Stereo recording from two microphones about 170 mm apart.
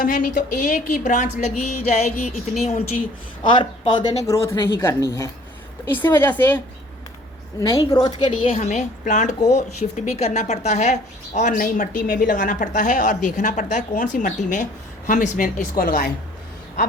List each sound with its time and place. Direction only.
0.0 s a woman's voice: 50° left (ahead or behind)
3.4 s a woman's voice: 30° left (ahead or behind); by 6.6 s 10° left (ahead or behind)
7.6 s a woman's voice: 20° left (ahead or behind)
8.4 s a woman's voice: 40° left (ahead or behind); by 16.1 s 60° left (ahead or behind)